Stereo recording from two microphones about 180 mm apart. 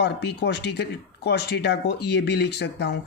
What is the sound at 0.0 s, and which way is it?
Speech, 70° left (ahead or behind).